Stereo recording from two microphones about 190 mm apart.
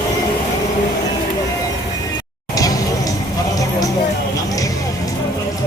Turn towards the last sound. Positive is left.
turn(degrees=20)  # may be behind; listen again after turning